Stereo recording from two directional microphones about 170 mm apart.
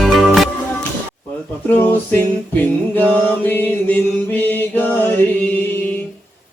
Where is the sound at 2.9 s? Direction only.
10° left (ahead or behind).